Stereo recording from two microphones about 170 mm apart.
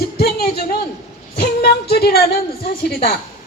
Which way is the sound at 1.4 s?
70° left (ahead or behind).